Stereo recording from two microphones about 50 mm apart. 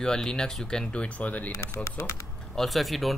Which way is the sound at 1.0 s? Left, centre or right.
Left.